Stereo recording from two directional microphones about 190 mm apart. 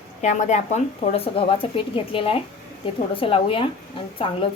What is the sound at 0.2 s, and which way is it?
Speech, 40° left (ahead or behind).